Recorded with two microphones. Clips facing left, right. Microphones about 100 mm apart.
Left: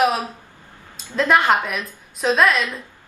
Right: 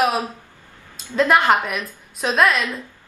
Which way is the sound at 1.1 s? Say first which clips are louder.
Right 1 dB; centre (ahead or behind).